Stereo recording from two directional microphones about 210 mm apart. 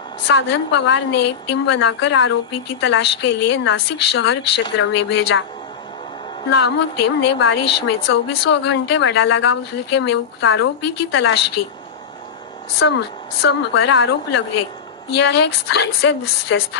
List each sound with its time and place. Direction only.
0.3 s a woman's voice: 55° left (ahead or behind)
6.5 s a woman's voice: 55° left (ahead or behind)
12.8 s a woman's voice: 65° left (ahead or behind)
13.4 s a woman's voice: 55° left (ahead or behind)